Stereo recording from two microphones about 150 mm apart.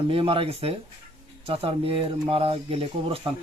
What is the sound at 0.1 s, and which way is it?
Speech, 40° right (ahead or behind).